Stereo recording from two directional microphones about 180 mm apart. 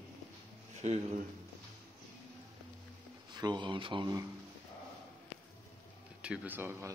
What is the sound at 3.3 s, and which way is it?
Speech, 25° right (ahead or behind).